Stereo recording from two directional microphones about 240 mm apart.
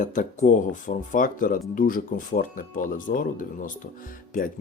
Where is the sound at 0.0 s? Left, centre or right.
Left.